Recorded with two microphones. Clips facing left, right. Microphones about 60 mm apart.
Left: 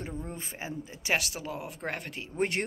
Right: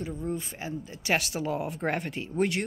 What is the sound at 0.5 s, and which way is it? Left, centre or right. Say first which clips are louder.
Speech: right 2 dB; centre.